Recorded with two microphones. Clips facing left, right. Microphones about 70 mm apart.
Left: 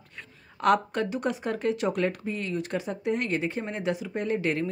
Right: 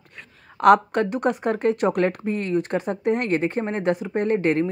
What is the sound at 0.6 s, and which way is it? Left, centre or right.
Speech, right.